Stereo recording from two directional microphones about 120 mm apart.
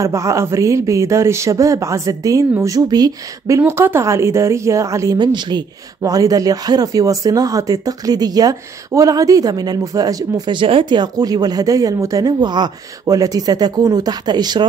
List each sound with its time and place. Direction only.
0.0 s speech: 25° right (ahead or behind)